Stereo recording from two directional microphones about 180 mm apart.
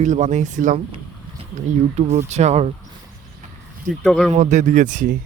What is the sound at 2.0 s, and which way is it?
Speech, 40° right (ahead or behind).